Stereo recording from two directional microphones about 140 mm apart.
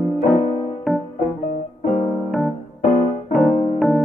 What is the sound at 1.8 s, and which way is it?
Keyboard, 50° left (ahead or behind).